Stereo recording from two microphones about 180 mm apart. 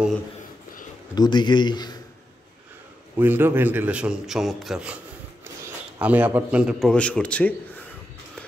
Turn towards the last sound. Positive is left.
turn(degrees=10)  # may be behind; listen again after turning